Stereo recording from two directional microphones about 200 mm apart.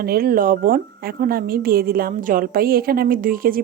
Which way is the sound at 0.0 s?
50° right (ahead or behind).